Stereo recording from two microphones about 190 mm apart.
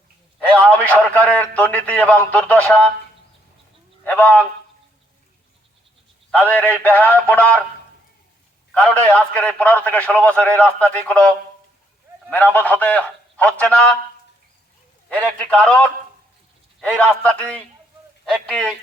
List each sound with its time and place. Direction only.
0.3 s a sound: 5° left (ahead or behind)
1.1 s a man's voice: 5° left (ahead or behind)
4.0 s a sound: 10° left (ahead or behind)
6.3 s a man's voice: 10° left (ahead or behind)
8.7 s a man's voice: 5° left (ahead or behind)
12.5 s a man's voice: 10° left (ahead or behind)
15.4 s a man's voice: 5° left (ahead or behind)